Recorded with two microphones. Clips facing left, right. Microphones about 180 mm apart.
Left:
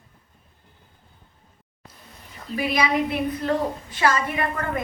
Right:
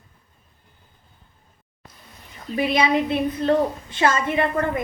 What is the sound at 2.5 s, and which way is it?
A woman's voice, 25° right (ahead or behind).